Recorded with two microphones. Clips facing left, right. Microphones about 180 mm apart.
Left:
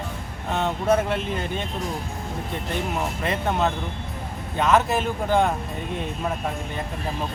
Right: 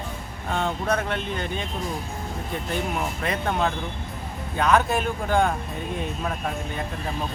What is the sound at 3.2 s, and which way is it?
Speech, 5° left (ahead or behind).